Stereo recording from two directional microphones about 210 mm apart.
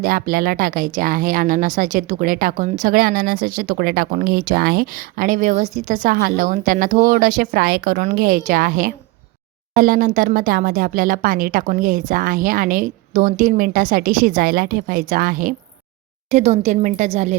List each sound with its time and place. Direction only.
0.0 s speech: 45° right (ahead or behind)